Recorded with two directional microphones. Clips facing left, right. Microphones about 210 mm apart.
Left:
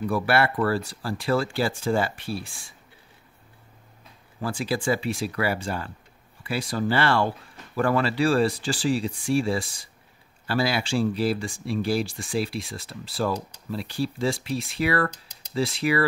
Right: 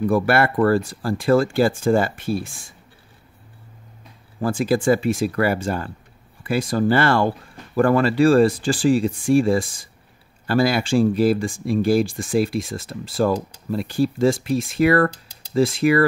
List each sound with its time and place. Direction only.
0.0 s speech: 50° right (ahead or behind)
4.4 s speech: 50° right (ahead or behind)